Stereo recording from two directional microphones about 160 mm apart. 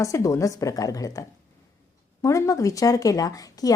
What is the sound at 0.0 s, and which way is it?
A woman's voice, 20° left (ahead or behind).